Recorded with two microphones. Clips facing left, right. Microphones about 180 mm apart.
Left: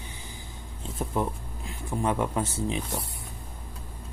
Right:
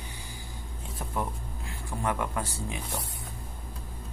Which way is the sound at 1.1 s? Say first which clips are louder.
Left 3 dB; 20° left (ahead or behind).